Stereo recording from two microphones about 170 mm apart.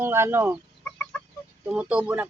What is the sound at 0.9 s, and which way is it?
Chicken, 10° left (ahead or behind).